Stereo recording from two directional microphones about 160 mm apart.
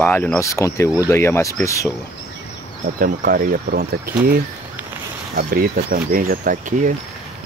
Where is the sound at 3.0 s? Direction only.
65° right (ahead or behind).